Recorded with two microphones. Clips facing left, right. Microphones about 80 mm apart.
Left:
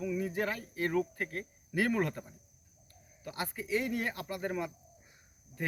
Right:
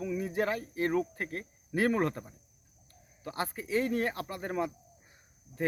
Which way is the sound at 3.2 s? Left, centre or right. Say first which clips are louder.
Right 3 dB; right.